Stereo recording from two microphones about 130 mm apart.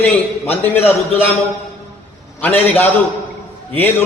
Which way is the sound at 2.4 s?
15° left (ahead or behind).